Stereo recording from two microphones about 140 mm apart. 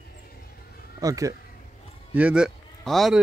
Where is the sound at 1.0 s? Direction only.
25° right (ahead or behind).